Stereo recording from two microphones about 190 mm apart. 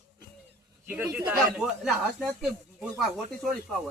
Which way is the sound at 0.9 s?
10° right (ahead or behind).